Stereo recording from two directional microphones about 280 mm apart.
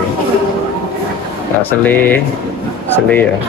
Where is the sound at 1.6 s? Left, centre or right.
Centre.